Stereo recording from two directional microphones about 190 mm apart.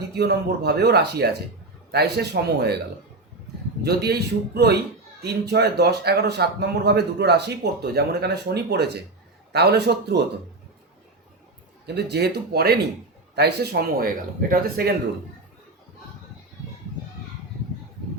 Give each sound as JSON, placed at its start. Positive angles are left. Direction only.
{"t": 0.2, "sound": "speech", "side_deg": -60}
{"t": 3.8, "sound": "speech", "side_deg": -55}
{"t": 11.9, "sound": "speech", "side_deg": -60}